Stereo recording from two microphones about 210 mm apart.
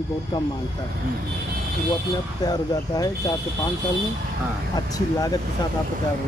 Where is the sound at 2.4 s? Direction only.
20° left (ahead or behind).